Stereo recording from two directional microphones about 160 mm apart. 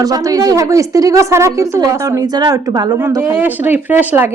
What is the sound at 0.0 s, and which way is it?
A woman's voice, 20° right (ahead or behind).